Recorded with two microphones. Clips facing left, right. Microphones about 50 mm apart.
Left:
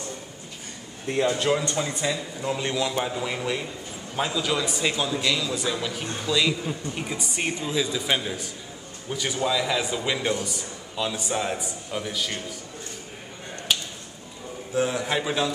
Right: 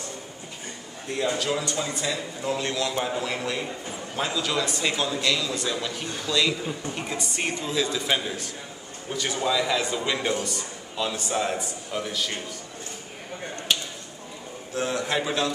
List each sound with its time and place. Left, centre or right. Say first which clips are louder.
1.1 s speech: left 5 dB; left
1.8 s a man's voice: left 2 dB; centre
13.7 s a sound: even; centre
14.7 s a man's voice: left 2 dB; centre